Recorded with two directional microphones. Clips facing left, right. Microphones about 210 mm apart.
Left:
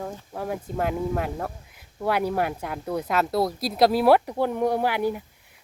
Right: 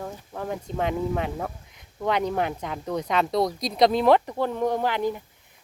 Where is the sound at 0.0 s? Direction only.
5° left (ahead or behind).